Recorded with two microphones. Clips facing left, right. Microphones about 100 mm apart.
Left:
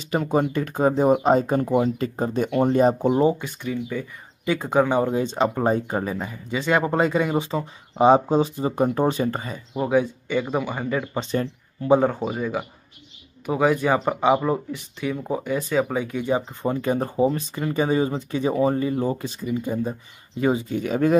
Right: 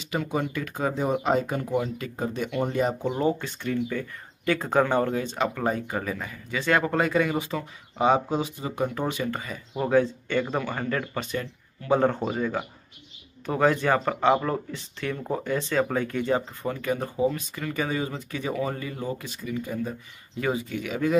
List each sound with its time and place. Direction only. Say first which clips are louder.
0.0 s speech: left 6 dB; 40° left (ahead or behind)
3.2 s speech: left 5 dB; 15° left (ahead or behind); by 9.6 s 30° left (ahead or behind)
9.8 s speech: left 1 dB; 10° left (ahead or behind)
11.1 s speech: left 6 dB; 30° left (ahead or behind)
12.0 s speech: left 1 dB; 5° left (ahead or behind)
16.6 s speech: left 5 dB; 30° left (ahead or behind)